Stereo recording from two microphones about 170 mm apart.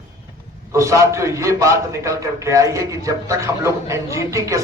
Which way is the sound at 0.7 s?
15° right (ahead or behind).